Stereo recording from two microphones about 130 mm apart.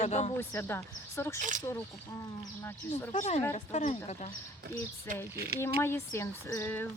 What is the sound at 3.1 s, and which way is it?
Speech, 60° left (ahead or behind).